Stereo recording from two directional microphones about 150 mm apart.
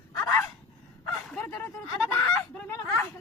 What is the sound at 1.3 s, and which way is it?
Bow-wow, 15° left (ahead or behind).